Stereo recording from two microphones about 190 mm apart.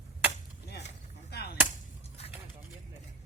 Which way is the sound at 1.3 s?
60° left (ahead or behind).